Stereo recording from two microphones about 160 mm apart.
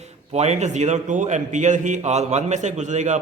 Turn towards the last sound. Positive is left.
turn(degrees=-50)  # may be behind; listen again after turning